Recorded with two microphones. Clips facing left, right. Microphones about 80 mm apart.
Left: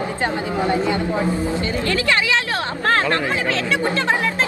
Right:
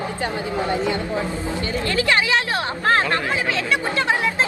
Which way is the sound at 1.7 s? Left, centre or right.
Right.